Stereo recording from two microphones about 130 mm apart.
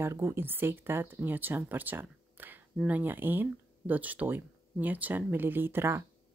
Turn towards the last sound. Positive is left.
turn(degrees=-20)  # may be behind; listen again after turning